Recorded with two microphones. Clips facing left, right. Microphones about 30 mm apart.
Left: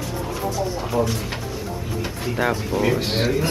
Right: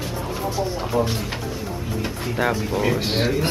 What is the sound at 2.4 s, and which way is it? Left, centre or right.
Speech, centre.